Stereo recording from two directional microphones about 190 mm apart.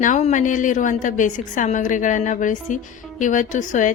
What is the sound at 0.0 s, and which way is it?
A woman's voice, 40° left (ahead or behind).